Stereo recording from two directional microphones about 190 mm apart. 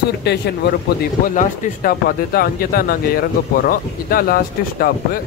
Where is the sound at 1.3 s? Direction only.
40° left (ahead or behind).